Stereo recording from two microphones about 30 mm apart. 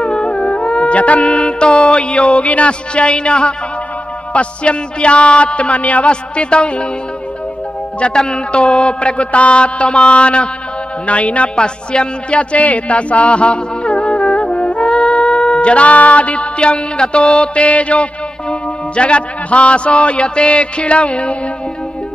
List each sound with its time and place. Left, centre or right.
0.0 s music: left
2.9 s music: left
6.0 s music: left
8.5 s music: left
11.1 s a woman's voice: left
11.5 s music: left
12.5 s music: left
18.5 s music: left